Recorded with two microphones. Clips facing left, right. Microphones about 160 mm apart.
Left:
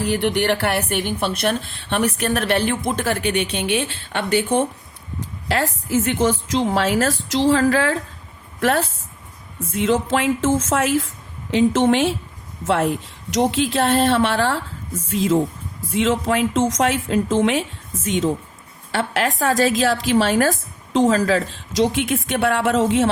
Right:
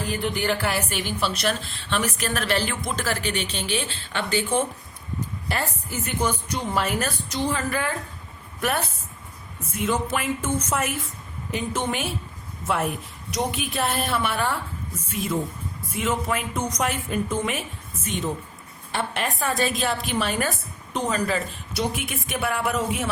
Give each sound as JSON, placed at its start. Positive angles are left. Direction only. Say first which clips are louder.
{"t": 0.0, "sound": "a woman's voice", "louder": "left 7 dB", "side_deg": 75}
{"t": 5.2, "sound": "a woman's voice", "louder": "left 6 dB", "side_deg": 85}
{"t": 18.9, "sound": "a woman's voice", "louder": "left 6 dB", "side_deg": 80}